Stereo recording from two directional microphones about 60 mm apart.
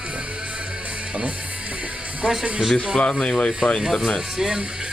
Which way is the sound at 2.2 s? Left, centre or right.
Centre.